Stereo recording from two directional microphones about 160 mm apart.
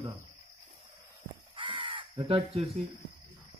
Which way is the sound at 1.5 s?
30° right (ahead or behind).